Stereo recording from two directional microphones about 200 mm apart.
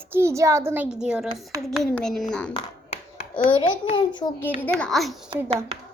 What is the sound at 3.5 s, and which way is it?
Speech, 25° left (ahead or behind).